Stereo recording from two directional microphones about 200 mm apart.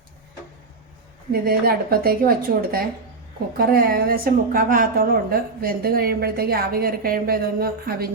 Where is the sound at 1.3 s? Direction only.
50° right (ahead or behind).